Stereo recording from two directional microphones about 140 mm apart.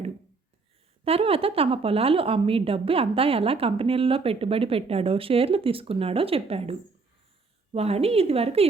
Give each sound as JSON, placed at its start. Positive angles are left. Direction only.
{"t": 1.0, "sound": "a woman's voice", "side_deg": -45}